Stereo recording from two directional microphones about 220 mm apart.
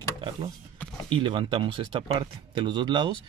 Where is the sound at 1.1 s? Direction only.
25° right (ahead or behind).